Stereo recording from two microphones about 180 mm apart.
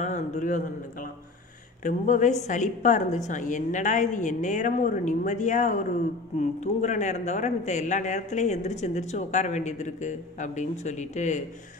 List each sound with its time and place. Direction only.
0.0 s a man's voice: 40° left (ahead or behind)
1.8 s a woman's voice: 45° left (ahead or behind)